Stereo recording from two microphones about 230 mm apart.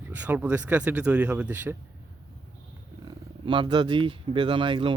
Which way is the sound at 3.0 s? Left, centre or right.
Right.